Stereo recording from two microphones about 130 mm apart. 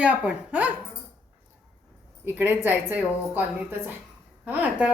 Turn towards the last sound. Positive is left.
turn(degrees=-10)  # may be behind; listen again after turning